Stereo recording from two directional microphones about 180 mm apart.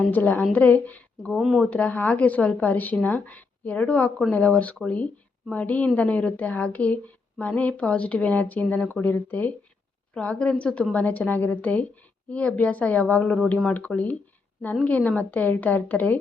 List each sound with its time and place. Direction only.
0.0 s speech: 10° left (ahead or behind)